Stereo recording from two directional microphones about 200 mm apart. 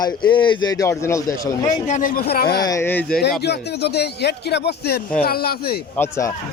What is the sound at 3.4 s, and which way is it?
A man's voice, 55° left (ahead or behind).